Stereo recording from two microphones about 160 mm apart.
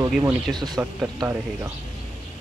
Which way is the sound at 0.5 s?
25° right (ahead or behind).